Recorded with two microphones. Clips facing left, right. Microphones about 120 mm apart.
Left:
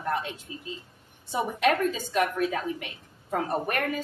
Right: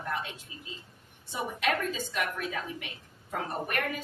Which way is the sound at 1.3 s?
45° left (ahead or behind).